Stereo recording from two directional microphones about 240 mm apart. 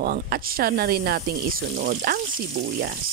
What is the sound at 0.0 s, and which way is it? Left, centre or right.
Speech, right.